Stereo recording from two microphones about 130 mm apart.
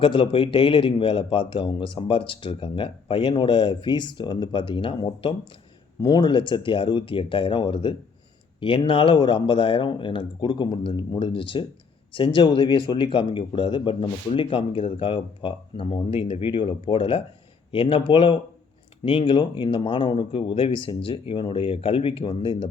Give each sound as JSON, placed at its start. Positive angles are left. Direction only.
{"t": 0.0, "sound": "a man's voice", "side_deg": 40}
{"t": 6.0, "sound": "a man's voice", "side_deg": 30}